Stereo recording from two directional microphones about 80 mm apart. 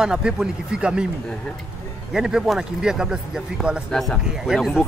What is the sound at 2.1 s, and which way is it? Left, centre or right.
Speech, centre.